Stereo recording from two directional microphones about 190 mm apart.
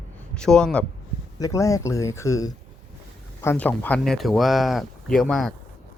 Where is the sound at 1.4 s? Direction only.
15° left (ahead or behind).